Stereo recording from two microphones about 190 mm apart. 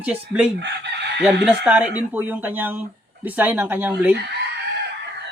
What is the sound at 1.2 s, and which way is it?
Speech, 5° right (ahead or behind).